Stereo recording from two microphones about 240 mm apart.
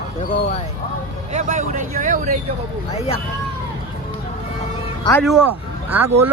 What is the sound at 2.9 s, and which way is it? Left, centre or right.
Speech, left.